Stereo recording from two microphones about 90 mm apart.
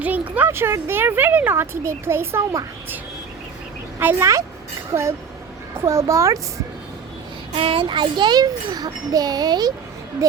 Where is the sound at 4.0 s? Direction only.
20° right (ahead or behind).